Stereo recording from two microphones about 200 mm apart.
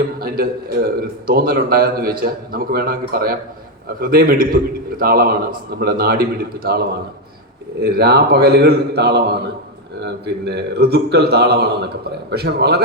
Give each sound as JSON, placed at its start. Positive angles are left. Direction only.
{"t": 0.2, "sound": "a man's voice", "side_deg": -45}